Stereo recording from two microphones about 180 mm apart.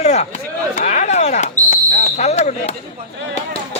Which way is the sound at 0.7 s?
40° left (ahead or behind).